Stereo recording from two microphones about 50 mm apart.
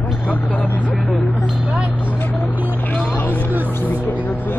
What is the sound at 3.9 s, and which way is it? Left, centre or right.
Speech, left.